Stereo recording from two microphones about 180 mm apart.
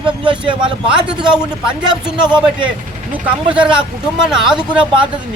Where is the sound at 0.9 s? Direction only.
5° right (ahead or behind).